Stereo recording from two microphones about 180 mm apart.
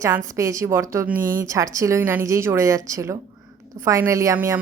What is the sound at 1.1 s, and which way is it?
Speech, 50° right (ahead or behind).